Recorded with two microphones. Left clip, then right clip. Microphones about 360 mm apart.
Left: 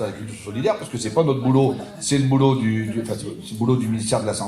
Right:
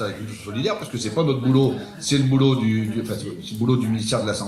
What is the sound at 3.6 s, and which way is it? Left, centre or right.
Speech, centre.